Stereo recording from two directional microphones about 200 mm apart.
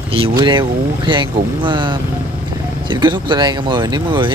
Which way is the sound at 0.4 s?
25° right (ahead or behind).